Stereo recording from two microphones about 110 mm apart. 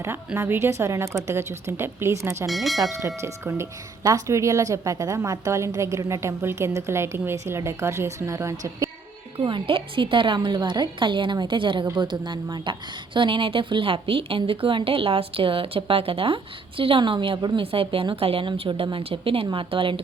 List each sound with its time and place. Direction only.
0.3 s speech: 20° right (ahead or behind)
2.5 s speech: centre (ahead or behind)
3.2 s speech: 25° right (ahead or behind)
9.4 s a woman's voice: 50° right (ahead or behind)